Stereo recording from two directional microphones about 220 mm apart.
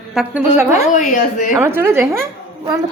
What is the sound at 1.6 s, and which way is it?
A woman's voice, 10° right (ahead or behind).